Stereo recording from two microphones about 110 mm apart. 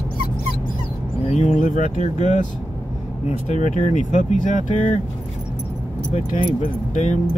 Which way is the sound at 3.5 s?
90° left.